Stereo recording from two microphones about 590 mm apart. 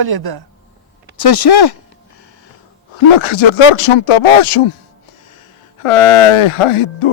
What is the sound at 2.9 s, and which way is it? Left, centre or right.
Speech, left.